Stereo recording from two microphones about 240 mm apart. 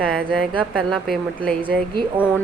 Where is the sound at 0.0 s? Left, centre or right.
Centre.